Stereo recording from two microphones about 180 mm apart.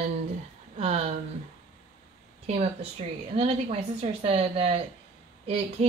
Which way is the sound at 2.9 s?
35° right (ahead or behind).